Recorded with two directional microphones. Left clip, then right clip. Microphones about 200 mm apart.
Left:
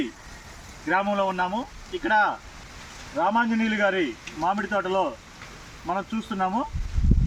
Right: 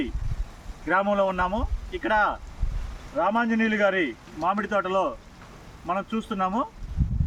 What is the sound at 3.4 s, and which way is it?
Speech, 20° right (ahead or behind).